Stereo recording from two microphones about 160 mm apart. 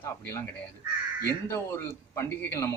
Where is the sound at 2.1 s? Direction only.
15° left (ahead or behind).